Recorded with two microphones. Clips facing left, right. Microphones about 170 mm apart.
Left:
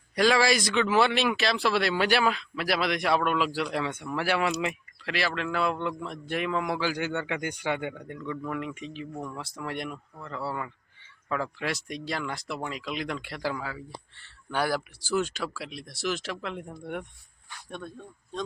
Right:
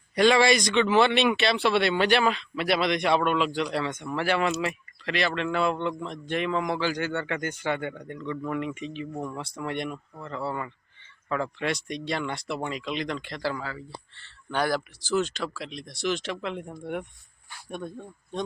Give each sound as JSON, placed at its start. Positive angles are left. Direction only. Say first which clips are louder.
{"t": 0.2, "sound": "a man's voice", "louder": "right 3 dB", "side_deg": 0}
{"t": 17.7, "sound": "speech", "louder": "right 4 dB", "side_deg": -15}